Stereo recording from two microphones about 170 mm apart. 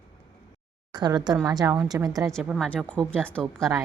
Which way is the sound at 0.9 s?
25° right (ahead or behind).